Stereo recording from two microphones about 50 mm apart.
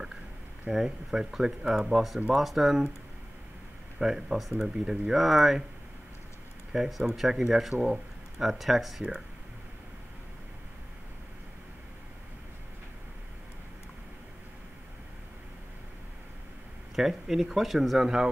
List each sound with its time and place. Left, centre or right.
0.7 s speech: centre
4.0 s speech: centre
6.7 s speech: centre
16.9 s speech: centre